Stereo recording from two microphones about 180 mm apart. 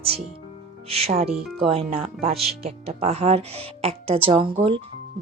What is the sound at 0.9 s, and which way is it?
Speech, 35° right (ahead or behind).